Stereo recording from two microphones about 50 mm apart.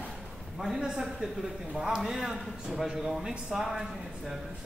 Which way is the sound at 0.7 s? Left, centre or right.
Centre.